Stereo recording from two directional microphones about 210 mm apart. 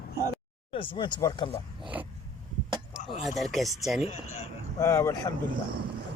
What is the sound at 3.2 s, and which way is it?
Speech, centre (ahead or behind).